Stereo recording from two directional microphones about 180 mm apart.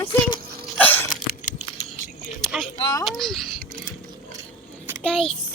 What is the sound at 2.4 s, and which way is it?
Speech, centre (ahead or behind).